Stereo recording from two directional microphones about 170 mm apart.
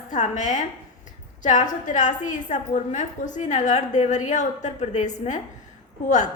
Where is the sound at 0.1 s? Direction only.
45° left (ahead or behind).